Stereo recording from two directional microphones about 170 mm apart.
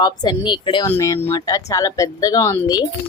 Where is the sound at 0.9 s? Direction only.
15° left (ahead or behind).